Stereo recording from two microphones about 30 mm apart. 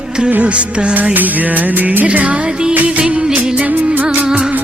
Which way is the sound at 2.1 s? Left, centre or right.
Right.